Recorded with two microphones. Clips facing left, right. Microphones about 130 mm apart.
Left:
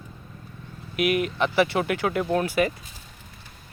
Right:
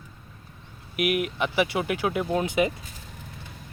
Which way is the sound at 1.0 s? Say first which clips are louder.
Left 2 dB; 10° right (ahead or behind).